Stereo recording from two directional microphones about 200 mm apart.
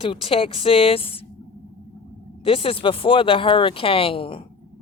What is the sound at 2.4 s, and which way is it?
Speech, 25° left (ahead or behind).